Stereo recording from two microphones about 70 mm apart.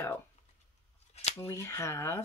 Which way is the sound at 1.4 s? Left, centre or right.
Left.